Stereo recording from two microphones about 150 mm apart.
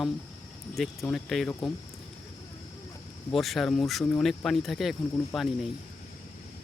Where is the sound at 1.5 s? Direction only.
20° left (ahead or behind).